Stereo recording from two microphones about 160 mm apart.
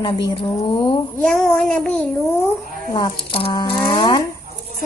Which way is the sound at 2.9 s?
30° left (ahead or behind).